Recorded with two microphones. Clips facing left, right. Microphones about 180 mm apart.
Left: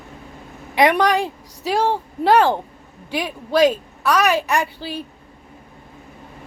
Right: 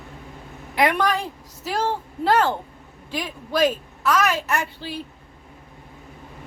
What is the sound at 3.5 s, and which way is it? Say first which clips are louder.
Speech: left 5 dB; 75° left (ahead or behind).